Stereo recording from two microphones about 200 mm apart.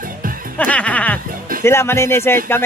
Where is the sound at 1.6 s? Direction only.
15° left (ahead or behind).